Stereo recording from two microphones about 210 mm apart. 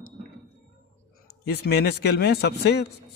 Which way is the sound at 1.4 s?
50° left (ahead or behind).